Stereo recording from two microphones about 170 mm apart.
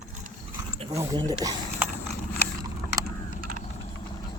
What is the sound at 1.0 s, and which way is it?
Speech, 20° right (ahead or behind).